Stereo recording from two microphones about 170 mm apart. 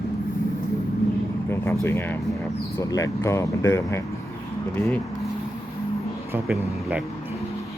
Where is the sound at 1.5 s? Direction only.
15° left (ahead or behind).